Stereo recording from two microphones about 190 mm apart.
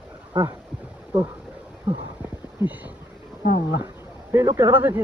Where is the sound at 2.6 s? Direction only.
15° right (ahead or behind).